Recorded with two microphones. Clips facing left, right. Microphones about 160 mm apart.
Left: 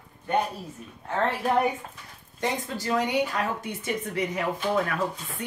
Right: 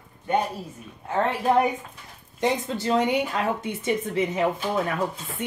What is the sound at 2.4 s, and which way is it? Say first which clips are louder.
Speech: right 5 dB; 25° right (ahead or behind).